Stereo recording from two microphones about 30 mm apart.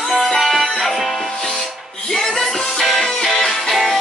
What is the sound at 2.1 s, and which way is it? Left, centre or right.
Music, centre.